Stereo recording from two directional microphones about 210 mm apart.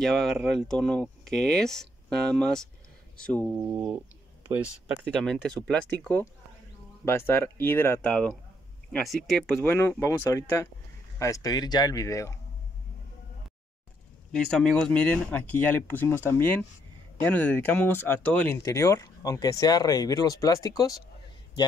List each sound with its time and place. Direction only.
0.0 s speech: centre (ahead or behind)
3.5 s speech: 10° right (ahead or behind)
5.1 s speech: 5° left (ahead or behind)
14.3 s speech: 5° left (ahead or behind)